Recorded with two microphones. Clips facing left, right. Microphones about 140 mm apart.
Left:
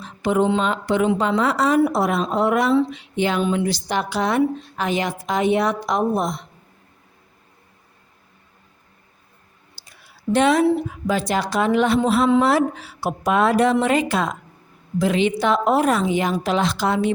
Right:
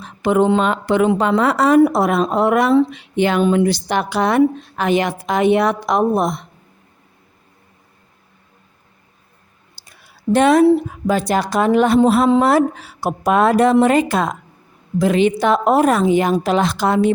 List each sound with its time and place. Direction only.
0.0 s a woman's voice: 60° right (ahead or behind)
9.8 s clicking: 50° right (ahead or behind)
10.3 s a woman's voice: 50° right (ahead or behind)